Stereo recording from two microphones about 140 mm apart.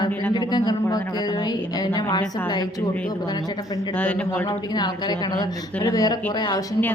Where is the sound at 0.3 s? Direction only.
30° left (ahead or behind).